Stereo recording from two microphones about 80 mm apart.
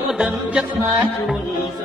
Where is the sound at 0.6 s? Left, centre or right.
Centre.